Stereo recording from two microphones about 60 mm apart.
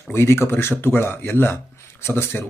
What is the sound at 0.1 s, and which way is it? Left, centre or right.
Speech, left.